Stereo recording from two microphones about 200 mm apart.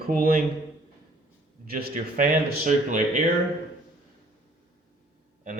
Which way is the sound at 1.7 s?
45° right (ahead or behind).